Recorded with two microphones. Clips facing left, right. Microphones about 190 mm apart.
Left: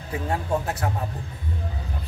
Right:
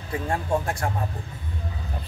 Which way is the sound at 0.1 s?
5° left (ahead or behind).